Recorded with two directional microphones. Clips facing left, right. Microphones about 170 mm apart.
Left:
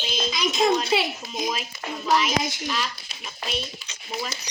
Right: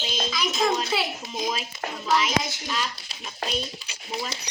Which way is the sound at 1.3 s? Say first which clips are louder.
Even; 30° right (ahead or behind).